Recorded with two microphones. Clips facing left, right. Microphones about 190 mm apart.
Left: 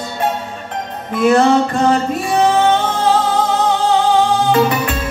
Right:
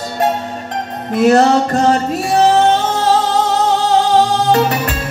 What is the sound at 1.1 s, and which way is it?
Music, 40° right (ahead or behind).